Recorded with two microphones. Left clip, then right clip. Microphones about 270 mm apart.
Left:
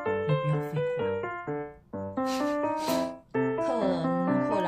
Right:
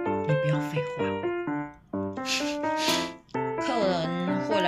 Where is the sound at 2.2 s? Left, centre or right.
Centre.